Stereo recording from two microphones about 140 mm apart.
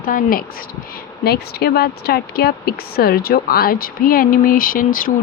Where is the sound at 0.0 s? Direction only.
85° left.